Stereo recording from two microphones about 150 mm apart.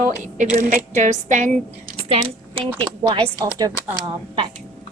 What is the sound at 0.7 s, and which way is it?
Speech, 55° right (ahead or behind).